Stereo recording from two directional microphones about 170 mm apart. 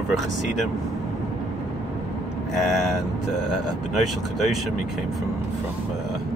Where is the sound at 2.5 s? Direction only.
Centre (ahead or behind).